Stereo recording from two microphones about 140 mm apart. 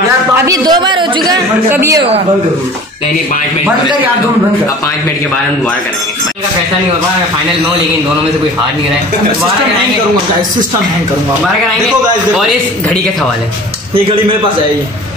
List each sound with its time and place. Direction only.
0.5 s speech: 30° right (ahead or behind)
1.7 s a woman's voice: 20° right (ahead or behind)